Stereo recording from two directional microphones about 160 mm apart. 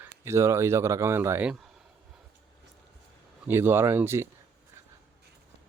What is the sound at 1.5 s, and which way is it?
Speech, centre (ahead or behind).